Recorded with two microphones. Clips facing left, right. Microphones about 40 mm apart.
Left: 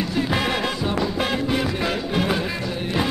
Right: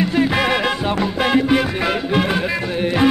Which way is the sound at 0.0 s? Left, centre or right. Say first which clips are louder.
Right 6 dB; right.